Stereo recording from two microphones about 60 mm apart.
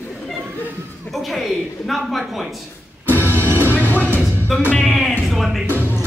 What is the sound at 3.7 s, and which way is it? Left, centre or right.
Train, left.